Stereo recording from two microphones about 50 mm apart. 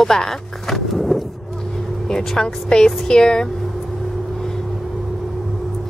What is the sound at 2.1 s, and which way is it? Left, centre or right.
A woman's voice, centre.